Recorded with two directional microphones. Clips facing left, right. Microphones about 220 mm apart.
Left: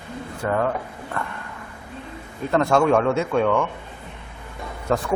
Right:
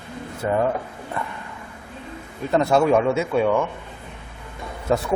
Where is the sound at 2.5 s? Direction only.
5° right (ahead or behind).